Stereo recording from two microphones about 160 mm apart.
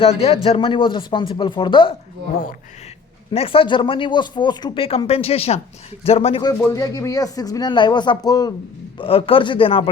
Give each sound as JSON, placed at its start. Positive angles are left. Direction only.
{"t": 0.0, "sound": "speech", "side_deg": 40}
{"t": 3.3, "sound": "speech", "side_deg": 35}
{"t": 6.6, "sound": "speech", "side_deg": 20}
{"t": 9.0, "sound": "speech", "side_deg": 35}